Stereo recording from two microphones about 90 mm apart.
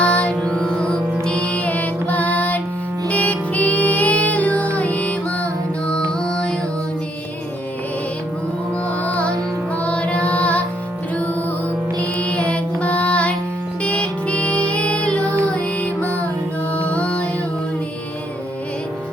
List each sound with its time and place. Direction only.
0.0 s music: 15° left (ahead or behind)
9.0 s music: 15° left (ahead or behind)
11.9 s music: 15° left (ahead or behind)